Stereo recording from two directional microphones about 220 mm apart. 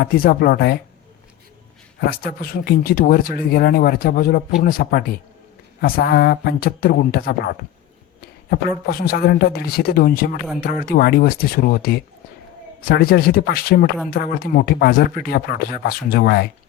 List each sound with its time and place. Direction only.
0.0 s speech: 45° left (ahead or behind)
2.0 s speech: 40° left (ahead or behind)
8.9 s speech: 45° left (ahead or behind)